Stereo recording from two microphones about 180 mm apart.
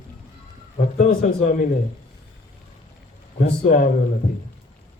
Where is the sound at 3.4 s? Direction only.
50° left (ahead or behind).